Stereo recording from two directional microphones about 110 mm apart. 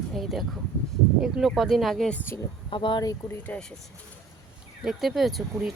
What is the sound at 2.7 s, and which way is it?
Speech, 50° left (ahead or behind).